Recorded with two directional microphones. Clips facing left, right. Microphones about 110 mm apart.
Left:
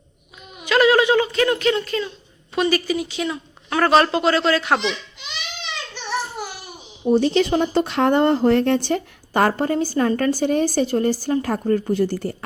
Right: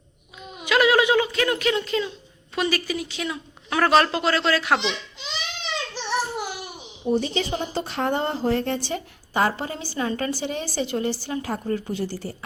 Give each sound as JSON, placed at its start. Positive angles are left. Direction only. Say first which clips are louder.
{"t": 0.6, "sound": "a sound", "louder": "left 3 dB", "side_deg": -10}
{"t": 1.8, "sound": "speech", "louder": "even", "side_deg": -20}
{"t": 2.6, "sound": "speech", "louder": "left 5 dB", "side_deg": 0}
{"t": 4.8, "sound": "baby laughter", "louder": "left 3 dB", "side_deg": -25}
{"t": 5.9, "sound": "a sound", "louder": "right 1 dB", "side_deg": -30}
{"t": 7.1, "sound": "speech", "louder": "left 7 dB", "side_deg": 80}